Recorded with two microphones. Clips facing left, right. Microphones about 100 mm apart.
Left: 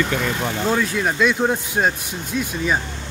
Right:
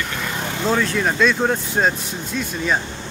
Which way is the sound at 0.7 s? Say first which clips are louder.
Right 3 dB; 5° left (ahead or behind).